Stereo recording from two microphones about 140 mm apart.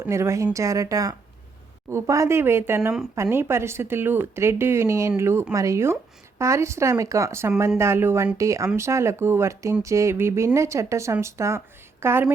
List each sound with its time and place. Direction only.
0.0 s a woman's voice: 20° right (ahead or behind)